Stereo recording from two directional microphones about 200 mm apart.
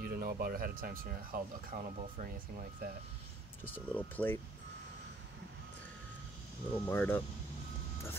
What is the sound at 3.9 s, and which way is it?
Speech, 10° left (ahead or behind).